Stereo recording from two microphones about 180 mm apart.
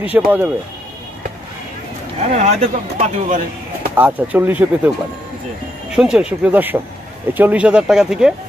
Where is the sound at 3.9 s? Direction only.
10° right (ahead or behind).